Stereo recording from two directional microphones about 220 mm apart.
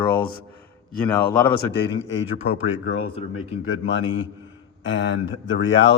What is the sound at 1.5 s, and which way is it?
Speech, 50° left (ahead or behind).